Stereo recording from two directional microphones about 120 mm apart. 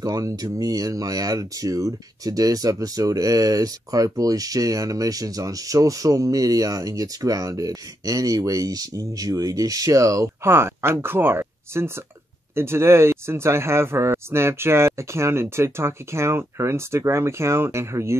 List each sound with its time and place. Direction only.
0.0 s speech: 30° right (ahead or behind)